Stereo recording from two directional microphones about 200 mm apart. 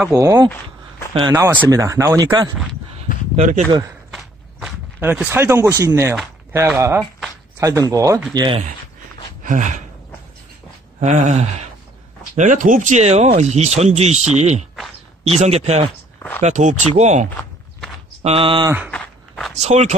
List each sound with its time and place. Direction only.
0.0 s speech: 15° right (ahead or behind)
3.3 s speech: 35° right (ahead or behind)
4.1 s walk: 5° right (ahead or behind)
6.8 s speech: 10° right (ahead or behind)
9.4 s gasp: 40° right (ahead or behind)
11.0 s speech: 35° right (ahead or behind)
16.2 s a sound: 10° left (ahead or behind)
16.4 s speech: 35° right (ahead or behind)
17.4 s walk: 5° left (ahead or behind)
18.2 s speech: 30° right (ahead or behind)
18.9 s walk: 5° left (ahead or behind)
19.6 s speech: 35° right (ahead or behind)